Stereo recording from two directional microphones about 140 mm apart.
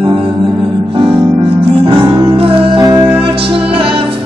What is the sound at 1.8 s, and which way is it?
Music, 35° right (ahead or behind).